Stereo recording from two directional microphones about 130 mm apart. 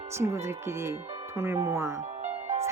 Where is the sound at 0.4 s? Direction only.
20° right (ahead or behind).